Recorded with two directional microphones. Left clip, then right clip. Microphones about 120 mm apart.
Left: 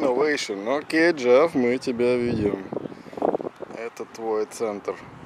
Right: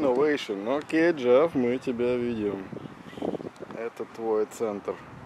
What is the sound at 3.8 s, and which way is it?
Speech, 20° left (ahead or behind).